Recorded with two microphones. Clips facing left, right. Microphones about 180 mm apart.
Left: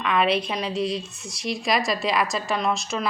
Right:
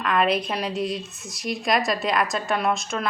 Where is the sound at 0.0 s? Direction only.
Centre (ahead or behind).